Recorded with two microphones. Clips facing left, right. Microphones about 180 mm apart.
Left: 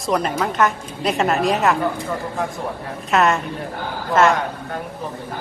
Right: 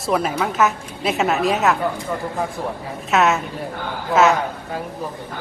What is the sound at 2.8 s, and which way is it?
A woman's voice, centre (ahead or behind).